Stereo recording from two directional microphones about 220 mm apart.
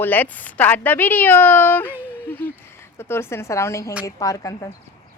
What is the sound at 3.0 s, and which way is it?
Speech, 10° left (ahead or behind).